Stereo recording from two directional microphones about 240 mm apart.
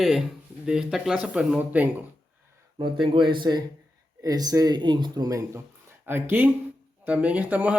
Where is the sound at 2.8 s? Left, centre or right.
Centre.